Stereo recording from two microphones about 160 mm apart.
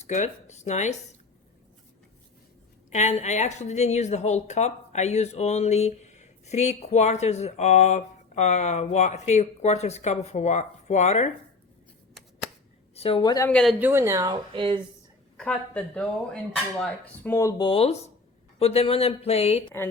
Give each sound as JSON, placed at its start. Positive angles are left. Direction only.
{"t": 0.0, "sound": "a woman's voice", "side_deg": 45}
{"t": 2.9, "sound": "a woman's voice", "side_deg": 45}
{"t": 12.9, "sound": "a woman's voice", "side_deg": 35}
{"t": 13.5, "sound": "speech", "side_deg": 5}
{"t": 13.7, "sound": "speech", "side_deg": -15}
{"t": 14.5, "sound": "speech", "side_deg": -35}
{"t": 15.4, "sound": "speech", "side_deg": 5}
{"t": 17.6, "sound": "speech", "side_deg": 35}